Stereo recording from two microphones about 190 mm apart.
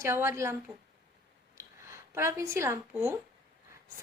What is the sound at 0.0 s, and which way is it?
Speech, 15° right (ahead or behind).